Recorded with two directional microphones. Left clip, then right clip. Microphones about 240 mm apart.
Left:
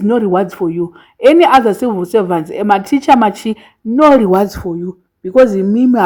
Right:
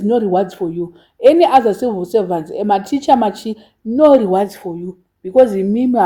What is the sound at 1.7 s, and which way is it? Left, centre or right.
Speech, left.